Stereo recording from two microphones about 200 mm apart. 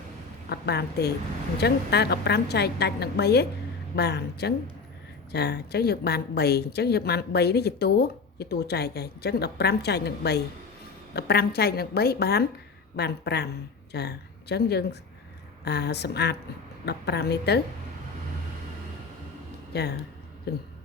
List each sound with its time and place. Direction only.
0.5 s a woman's voice: 55° left (ahead or behind)
19.7 s a woman's voice: 55° left (ahead or behind)